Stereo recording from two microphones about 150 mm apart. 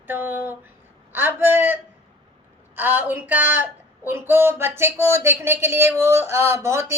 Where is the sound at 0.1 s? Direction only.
15° right (ahead or behind).